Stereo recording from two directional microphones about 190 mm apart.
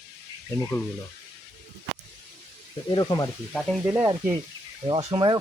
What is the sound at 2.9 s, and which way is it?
Speech, 20° left (ahead or behind).